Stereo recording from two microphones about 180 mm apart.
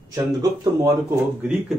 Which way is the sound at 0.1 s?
20° right (ahead or behind).